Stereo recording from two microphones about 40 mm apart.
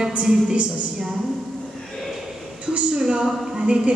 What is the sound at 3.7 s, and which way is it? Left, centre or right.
Speech, right.